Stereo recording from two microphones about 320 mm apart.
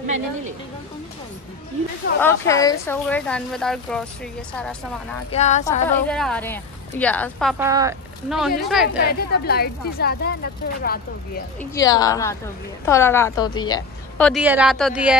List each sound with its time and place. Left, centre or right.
0.0 s a woman's voice: right
2.2 s a woman's voice: centre
5.3 s a woman's voice: left
5.9 s a woman's voice: centre
7.6 s a woman's voice: centre
8.8 s a woman's voice: left
11.7 s a woman's voice: centre